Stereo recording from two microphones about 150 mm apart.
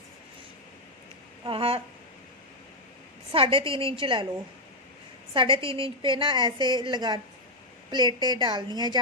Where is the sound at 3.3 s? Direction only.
35° right (ahead or behind).